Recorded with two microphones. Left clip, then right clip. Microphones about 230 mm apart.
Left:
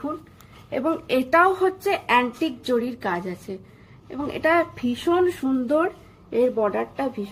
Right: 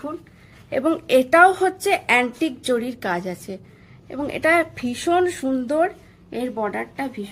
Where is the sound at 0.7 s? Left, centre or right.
Right.